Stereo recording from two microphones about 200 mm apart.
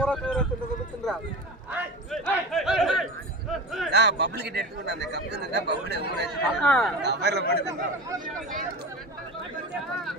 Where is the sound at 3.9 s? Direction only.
55° right (ahead or behind).